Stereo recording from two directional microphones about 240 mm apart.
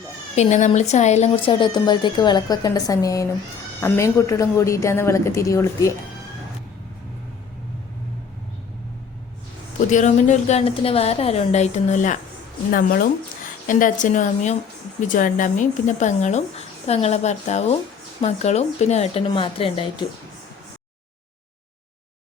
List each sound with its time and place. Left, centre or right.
0.3 s a woman's voice: left; by 5.9 s centre
9.9 s speech: left